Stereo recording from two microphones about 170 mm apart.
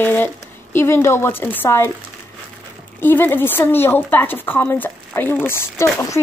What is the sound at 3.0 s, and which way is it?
A woman's voice, 10° left (ahead or behind).